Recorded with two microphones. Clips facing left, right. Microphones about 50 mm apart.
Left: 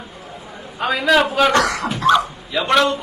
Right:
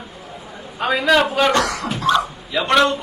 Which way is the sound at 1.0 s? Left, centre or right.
Centre.